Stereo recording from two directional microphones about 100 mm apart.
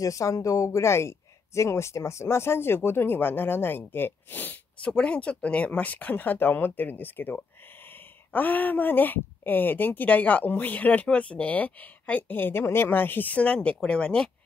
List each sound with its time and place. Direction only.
0.0 s speech: 35° left (ahead or behind); by 14.3 s 10° left (ahead or behind)